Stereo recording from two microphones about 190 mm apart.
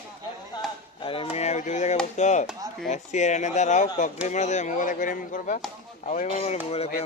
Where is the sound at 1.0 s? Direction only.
30° left (ahead or behind).